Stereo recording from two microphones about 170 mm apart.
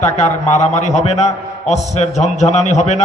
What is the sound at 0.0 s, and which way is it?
A man's voice, 40° left (ahead or behind).